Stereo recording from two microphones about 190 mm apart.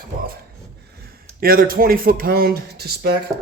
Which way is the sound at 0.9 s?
55° right (ahead or behind).